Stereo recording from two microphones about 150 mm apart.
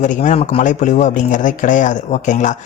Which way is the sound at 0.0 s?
55° left (ahead or behind).